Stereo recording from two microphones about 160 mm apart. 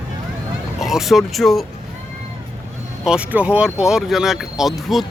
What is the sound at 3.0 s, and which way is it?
Speech, 5° right (ahead or behind).